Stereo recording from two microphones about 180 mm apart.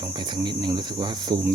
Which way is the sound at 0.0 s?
25° right (ahead or behind).